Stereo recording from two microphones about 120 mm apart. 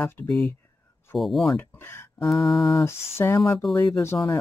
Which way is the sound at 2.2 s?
Centre (ahead or behind).